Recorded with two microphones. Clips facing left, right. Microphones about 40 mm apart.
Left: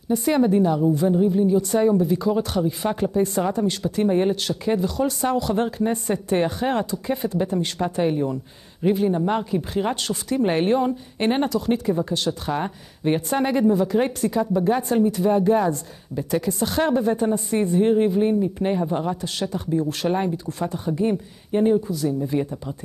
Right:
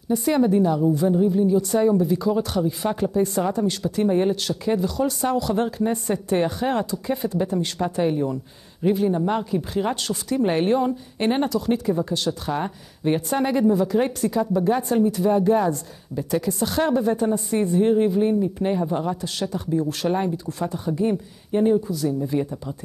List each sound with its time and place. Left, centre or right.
0.1 s speech: left